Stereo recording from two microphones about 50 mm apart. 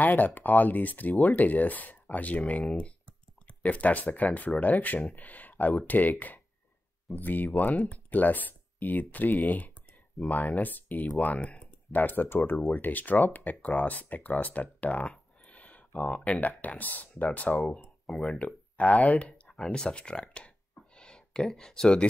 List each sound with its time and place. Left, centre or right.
0.0 s speech: left
19.5 s a sound: centre
21.5 s speech: centre